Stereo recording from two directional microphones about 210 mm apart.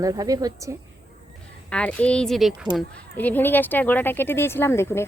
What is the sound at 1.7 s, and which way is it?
A woman's voice, 5° left (ahead or behind).